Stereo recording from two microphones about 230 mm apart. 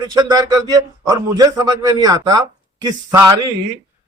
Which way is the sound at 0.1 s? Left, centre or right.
Centre.